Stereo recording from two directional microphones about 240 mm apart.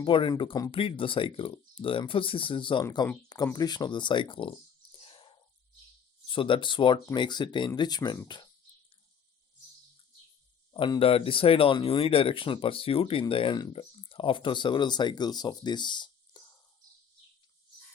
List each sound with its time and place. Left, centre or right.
0.0 s speech: left
10.7 s speech: centre